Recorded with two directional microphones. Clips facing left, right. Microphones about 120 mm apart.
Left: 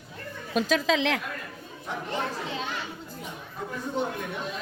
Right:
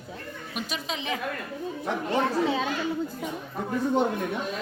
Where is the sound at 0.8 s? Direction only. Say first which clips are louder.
Left 7 dB; 90° left.